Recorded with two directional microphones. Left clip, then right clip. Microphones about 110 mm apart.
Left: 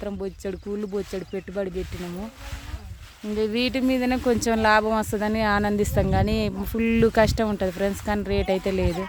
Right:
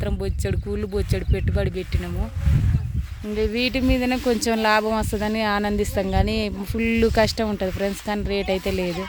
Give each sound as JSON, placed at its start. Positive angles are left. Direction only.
{"t": 0.0, "sound": "speech", "side_deg": 0}
{"t": 3.3, "sound": "speech", "side_deg": 10}
{"t": 3.8, "sound": "speech", "side_deg": -20}